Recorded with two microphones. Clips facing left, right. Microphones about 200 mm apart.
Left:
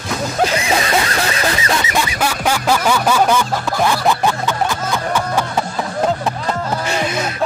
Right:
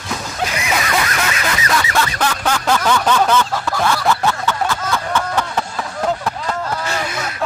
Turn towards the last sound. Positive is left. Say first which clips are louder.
# left 4 dB
turn(degrees=20)  # may be behind; listen again after turning